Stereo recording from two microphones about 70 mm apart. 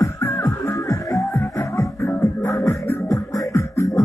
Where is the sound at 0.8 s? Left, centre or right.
Left.